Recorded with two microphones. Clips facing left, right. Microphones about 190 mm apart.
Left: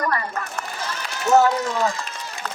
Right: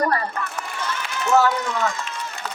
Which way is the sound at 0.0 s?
35° right (ahead or behind).